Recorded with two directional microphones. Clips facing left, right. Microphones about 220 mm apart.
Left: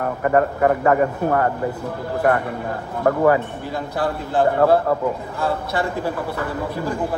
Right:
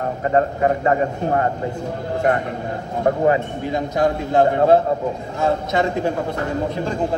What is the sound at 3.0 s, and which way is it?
A man's voice, 20° right (ahead or behind).